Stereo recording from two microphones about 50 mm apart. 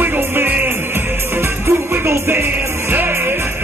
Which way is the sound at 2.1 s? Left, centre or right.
Right.